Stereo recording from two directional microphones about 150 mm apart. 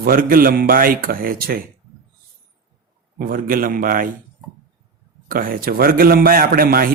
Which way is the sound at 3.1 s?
70° right (ahead or behind).